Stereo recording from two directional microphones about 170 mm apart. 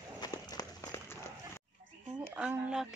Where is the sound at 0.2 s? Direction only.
20° left (ahead or behind).